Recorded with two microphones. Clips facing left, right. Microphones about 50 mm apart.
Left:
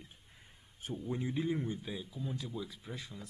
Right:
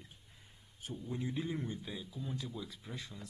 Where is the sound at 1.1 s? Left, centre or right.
Centre.